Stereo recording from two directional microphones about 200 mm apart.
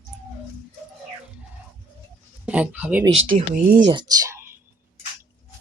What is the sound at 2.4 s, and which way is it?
Speech, 5° right (ahead or behind).